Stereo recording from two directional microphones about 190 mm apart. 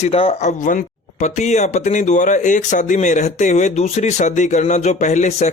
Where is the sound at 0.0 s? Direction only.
30° left (ahead or behind).